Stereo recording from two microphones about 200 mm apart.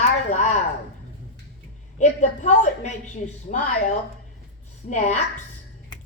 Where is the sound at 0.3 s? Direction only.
35° left (ahead or behind).